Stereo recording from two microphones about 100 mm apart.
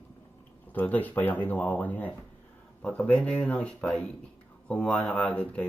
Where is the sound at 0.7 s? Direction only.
15° left (ahead or behind).